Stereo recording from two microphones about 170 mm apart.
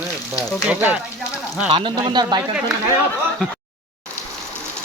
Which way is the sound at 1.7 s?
30° right (ahead or behind).